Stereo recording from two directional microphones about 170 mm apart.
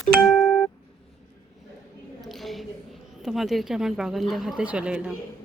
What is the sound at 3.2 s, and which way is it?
A woman's voice, centre (ahead or behind).